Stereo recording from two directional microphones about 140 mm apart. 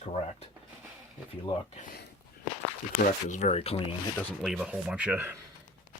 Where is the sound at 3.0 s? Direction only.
65° left (ahead or behind); by 3.8 s 45° left (ahead or behind).